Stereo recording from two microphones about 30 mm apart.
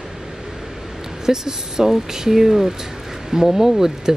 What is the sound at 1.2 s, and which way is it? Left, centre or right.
Speech, centre.